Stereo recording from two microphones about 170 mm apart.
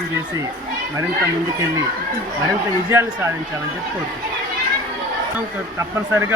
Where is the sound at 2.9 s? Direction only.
15° right (ahead or behind).